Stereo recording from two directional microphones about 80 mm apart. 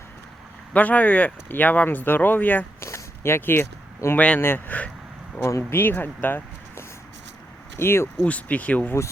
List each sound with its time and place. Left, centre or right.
0.7 s speech: centre
2.8 s speech: left
5.4 s speech: left
8.3 s speech: centre